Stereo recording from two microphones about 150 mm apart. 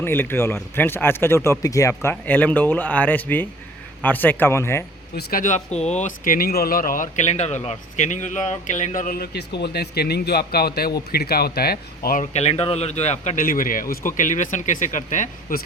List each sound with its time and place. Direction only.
0.0 s speech: 15° left (ahead or behind)
5.1 s speech: 65° left (ahead or behind); by 12.2 s 85° left
12.2 s speech: 45° left (ahead or behind)